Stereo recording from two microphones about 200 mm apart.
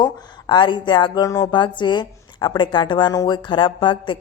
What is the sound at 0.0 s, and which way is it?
Speech, 20° left (ahead or behind).